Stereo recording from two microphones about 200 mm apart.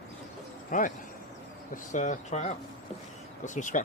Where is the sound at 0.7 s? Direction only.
40° left (ahead or behind).